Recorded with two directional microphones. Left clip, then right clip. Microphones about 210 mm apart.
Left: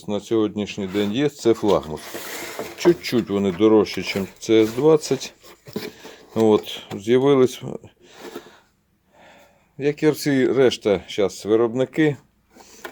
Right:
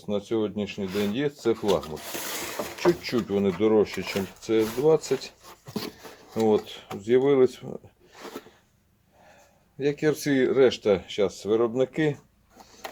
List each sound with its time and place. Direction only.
0.0 s speech: 45° left (ahead or behind)
6.3 s speech: 40° left (ahead or behind)
9.8 s speech: 35° left (ahead or behind)